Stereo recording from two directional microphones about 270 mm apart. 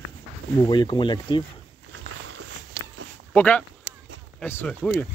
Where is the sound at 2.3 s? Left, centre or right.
Right.